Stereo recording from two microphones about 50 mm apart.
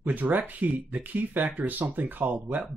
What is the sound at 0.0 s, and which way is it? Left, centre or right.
Speech, right.